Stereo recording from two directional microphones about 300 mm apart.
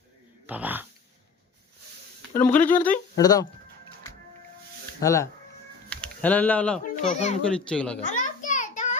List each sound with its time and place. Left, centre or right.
0.4 s speech: centre
2.3 s a child's voice: centre
4.9 s speech: centre
6.8 s a child's voice: left
7.7 s a child's voice: centre
8.0 s a sound: left